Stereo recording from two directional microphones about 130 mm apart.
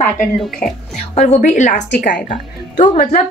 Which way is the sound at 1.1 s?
65° left (ahead or behind).